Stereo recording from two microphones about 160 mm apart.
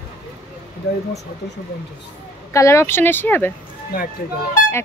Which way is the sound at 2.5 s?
15° left (ahead or behind).